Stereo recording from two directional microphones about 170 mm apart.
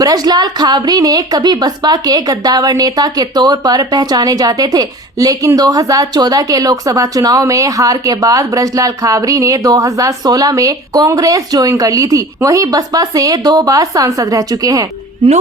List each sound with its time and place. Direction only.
0.0 s a woman's voice: 20° right (ahead or behind)